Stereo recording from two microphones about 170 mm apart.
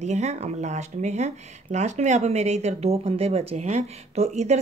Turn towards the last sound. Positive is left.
turn(degrees=-40)  # may be behind; listen again after turning